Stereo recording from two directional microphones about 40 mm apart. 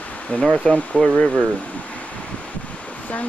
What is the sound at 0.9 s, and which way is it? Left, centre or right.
Speech, left.